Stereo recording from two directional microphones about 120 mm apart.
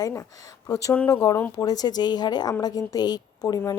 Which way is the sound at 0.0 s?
25° left (ahead or behind).